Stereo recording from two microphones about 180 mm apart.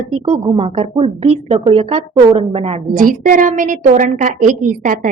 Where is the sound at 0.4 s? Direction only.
30° right (ahead or behind).